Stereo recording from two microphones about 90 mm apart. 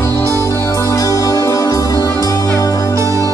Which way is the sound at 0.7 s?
40° left (ahead or behind).